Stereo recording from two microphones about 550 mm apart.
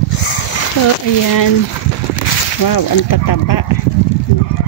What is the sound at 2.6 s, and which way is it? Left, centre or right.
Speech, left.